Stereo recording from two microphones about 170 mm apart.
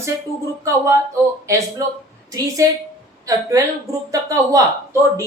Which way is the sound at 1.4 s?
20° right (ahead or behind).